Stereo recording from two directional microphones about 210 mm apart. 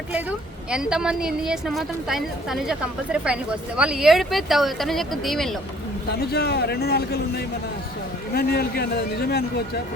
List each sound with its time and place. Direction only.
0.1 s a woman's voice: 5° right (ahead or behind)
6.1 s a man's voice: 50° left (ahead or behind)